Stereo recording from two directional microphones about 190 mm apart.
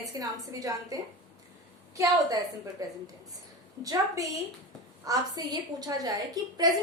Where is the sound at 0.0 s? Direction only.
15° right (ahead or behind).